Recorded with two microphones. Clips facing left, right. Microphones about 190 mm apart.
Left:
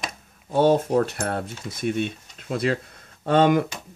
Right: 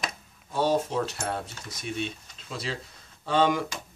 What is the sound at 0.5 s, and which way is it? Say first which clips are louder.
Speech: left 7 dB; 55° left (ahead or behind).